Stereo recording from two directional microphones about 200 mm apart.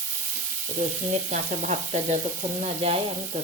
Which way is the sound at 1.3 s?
40° right (ahead or behind).